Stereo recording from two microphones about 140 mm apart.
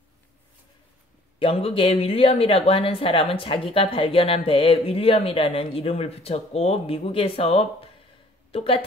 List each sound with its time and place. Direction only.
1.4 s speech: 40° left (ahead or behind)